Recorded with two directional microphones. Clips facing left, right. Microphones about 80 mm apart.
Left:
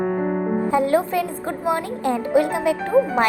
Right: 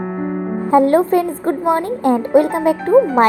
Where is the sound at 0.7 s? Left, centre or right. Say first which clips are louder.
Right 9 dB; right.